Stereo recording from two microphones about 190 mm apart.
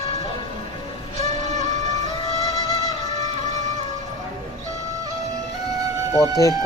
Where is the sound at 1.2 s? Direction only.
40° right (ahead or behind).